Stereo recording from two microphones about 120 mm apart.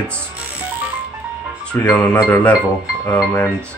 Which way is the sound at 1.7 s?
15° left (ahead or behind).